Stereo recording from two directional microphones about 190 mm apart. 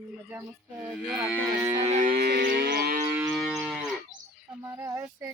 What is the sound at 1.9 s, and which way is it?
Music, 40° right (ahead or behind).